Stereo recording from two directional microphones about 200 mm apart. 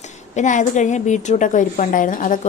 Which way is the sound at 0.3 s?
40° left (ahead or behind).